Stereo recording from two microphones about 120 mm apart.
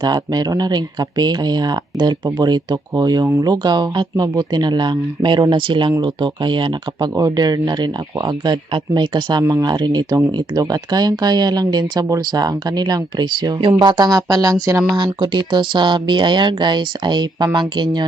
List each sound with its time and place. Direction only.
0.0 s speech: 35° right (ahead or behind)
9.4 s speech: 30° right (ahead or behind)
14.9 s speech: 40° right (ahead or behind)